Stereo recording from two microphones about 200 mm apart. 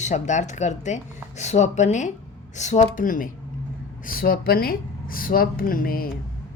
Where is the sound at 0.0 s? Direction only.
35° left (ahead or behind).